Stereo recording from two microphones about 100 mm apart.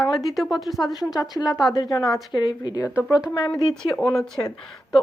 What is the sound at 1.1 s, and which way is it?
Speech, 40° left (ahead or behind).